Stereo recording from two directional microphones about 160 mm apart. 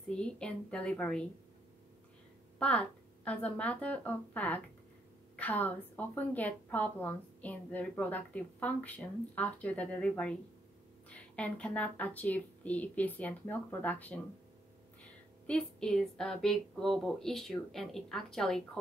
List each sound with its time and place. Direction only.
0.1 s a woman's voice: 5° left (ahead or behind)
2.6 s a woman's voice: 10° left (ahead or behind)
15.4 s a woman's voice: 5° left (ahead or behind)